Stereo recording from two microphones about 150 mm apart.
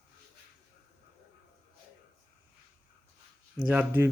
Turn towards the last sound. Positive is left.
turn(degrees=-10)  # may be behind; listen again after turning